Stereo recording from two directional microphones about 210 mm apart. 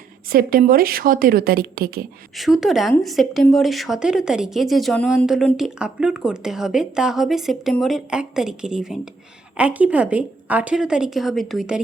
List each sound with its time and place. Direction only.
0.3 s a woman's voice: 45° right (ahead or behind)
2.3 s speech: centre (ahead or behind)